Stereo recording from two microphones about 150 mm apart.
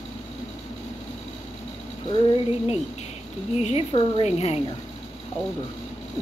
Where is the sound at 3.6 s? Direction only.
40° left (ahead or behind).